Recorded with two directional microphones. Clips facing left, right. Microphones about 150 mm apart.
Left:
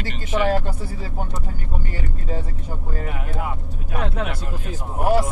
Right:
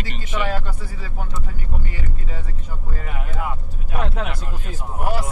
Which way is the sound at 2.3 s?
40° left (ahead or behind).